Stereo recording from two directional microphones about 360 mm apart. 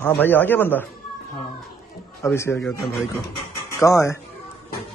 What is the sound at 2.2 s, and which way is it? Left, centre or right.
Speech, centre.